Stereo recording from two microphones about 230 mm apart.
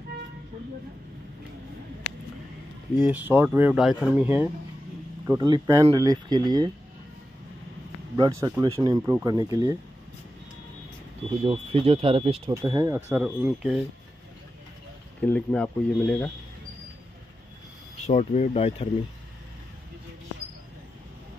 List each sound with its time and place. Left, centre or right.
3.0 s speech: centre
8.2 s speech: centre
11.4 s speech: right; by 13.7 s centre
15.2 s speech: centre
18.0 s speech: left